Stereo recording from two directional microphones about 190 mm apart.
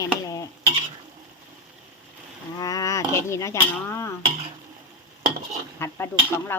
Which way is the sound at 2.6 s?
20° left (ahead or behind).